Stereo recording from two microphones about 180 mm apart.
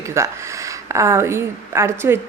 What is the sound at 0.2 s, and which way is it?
A woman's voice, 15° right (ahead or behind).